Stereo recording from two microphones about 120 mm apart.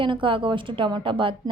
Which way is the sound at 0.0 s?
45° right (ahead or behind).